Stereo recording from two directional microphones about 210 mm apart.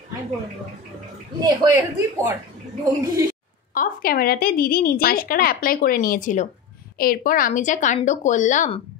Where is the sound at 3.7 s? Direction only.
45° left (ahead or behind).